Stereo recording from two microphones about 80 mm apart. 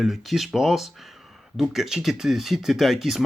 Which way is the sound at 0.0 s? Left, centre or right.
Centre.